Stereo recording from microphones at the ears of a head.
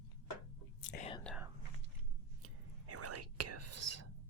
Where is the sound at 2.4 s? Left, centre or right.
Right.